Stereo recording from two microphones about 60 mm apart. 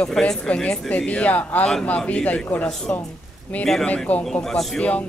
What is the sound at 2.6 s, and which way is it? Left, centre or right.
Speech, centre.